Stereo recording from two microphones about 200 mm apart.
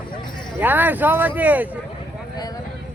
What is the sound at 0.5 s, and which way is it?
Speech, 10° right (ahead or behind).